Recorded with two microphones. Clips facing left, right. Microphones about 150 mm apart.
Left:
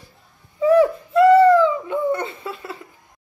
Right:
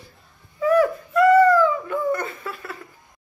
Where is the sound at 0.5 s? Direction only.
30° left (ahead or behind).